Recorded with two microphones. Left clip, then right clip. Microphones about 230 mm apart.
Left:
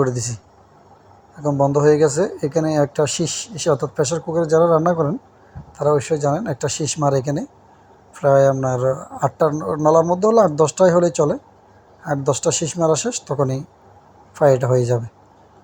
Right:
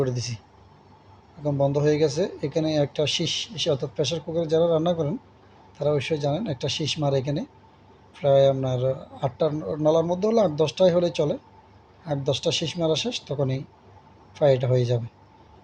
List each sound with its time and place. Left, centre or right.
0.0 s speech: left
1.5 s speech: left